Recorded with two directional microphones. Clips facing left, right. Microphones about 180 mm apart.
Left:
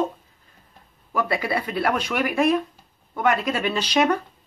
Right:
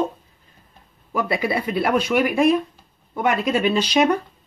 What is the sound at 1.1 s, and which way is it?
Speech, 15° right (ahead or behind).